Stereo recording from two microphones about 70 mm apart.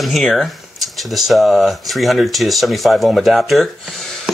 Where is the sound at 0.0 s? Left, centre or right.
Centre.